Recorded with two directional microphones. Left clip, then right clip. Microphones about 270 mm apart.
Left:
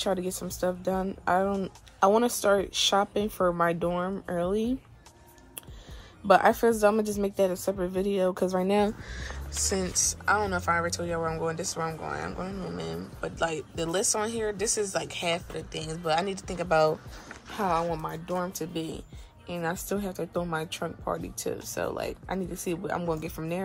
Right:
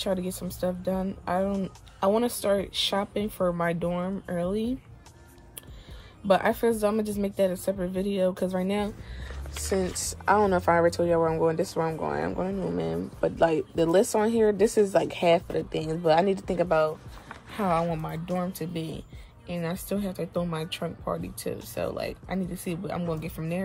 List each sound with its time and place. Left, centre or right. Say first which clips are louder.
0.0 s speech: even; centre
6.2 s speech: left 2 dB; centre
9.7 s a woman's voice: even; centre